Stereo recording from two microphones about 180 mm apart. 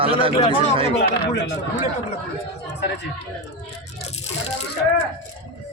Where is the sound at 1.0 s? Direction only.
75° left (ahead or behind).